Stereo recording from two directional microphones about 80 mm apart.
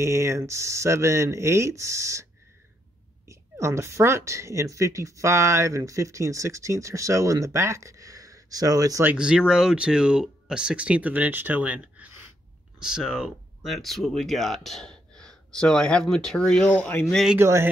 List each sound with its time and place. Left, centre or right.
0.0 s a woman's voice: right
3.3 s a woman's voice: right
9.1 s speech: centre
13.7 s speech: centre
17.4 s a woman's voice: right